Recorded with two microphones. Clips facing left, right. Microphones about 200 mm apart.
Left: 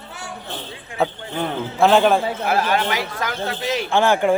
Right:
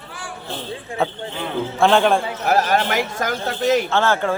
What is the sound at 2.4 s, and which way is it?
Speech, 40° right (ahead or behind).